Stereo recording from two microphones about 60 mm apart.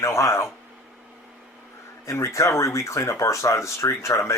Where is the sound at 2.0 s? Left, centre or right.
Left.